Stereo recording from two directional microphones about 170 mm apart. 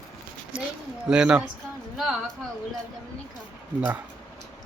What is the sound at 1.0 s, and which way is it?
Speech, 5° right (ahead or behind).